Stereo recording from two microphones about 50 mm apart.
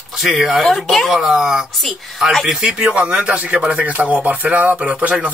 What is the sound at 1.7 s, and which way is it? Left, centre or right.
Speech, centre.